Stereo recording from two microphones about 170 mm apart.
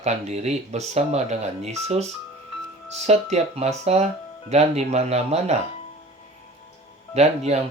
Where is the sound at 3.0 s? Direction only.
40° right (ahead or behind).